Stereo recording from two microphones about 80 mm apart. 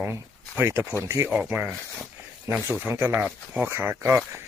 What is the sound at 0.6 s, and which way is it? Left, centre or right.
Speech, right.